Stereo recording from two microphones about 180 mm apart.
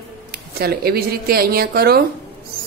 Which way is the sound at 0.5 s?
60° right (ahead or behind).